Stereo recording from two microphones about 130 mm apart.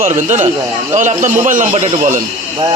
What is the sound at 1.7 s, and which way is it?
Speech, 50° right (ahead or behind).